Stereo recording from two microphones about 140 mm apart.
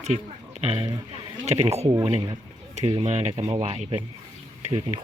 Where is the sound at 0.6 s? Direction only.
45° right (ahead or behind).